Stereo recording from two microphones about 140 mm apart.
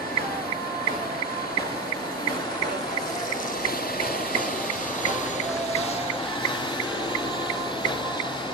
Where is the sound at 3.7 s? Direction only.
90° left.